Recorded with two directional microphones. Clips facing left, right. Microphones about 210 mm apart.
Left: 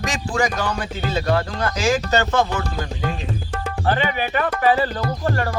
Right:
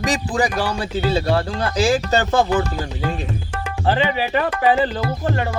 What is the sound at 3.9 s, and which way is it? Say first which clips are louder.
Speech: right 2 dB; 25° right (ahead or behind).